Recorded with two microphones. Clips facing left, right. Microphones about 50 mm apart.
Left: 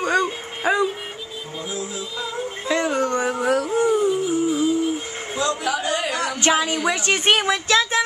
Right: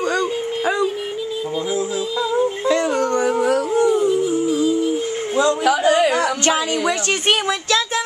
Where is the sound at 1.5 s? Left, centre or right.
Right.